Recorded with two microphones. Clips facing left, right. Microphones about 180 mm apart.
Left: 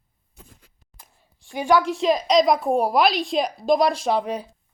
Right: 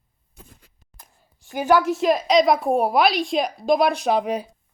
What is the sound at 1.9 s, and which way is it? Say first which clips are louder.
A woman's voice: right 1 dB; 5° right (ahead or behind).